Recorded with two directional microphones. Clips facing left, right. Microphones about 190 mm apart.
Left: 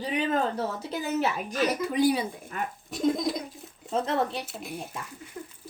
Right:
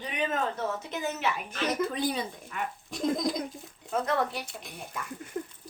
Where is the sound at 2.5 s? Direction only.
40° left (ahead or behind).